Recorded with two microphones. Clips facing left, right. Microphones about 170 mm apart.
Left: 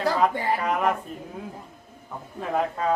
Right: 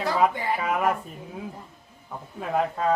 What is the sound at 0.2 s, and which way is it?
Speech, 5° right (ahead or behind).